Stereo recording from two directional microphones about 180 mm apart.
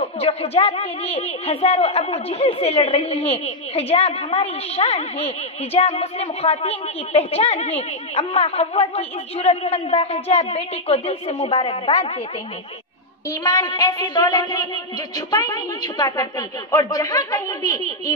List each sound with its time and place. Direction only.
0.0 s a woman's voice: 35° left (ahead or behind)
13.3 s a woman's voice: 20° left (ahead or behind)